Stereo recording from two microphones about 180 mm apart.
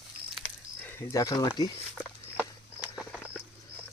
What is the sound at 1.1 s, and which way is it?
Speech, 20° left (ahead or behind).